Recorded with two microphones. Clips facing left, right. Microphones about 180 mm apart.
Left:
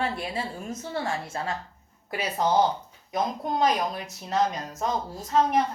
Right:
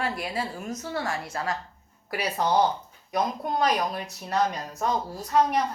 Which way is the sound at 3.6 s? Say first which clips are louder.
Left 1 dB; 20° left (ahead or behind).